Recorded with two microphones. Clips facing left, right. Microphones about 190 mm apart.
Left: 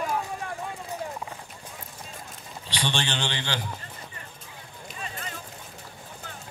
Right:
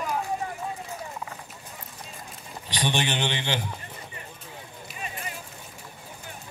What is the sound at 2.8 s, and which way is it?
Speech, 15° right (ahead or behind).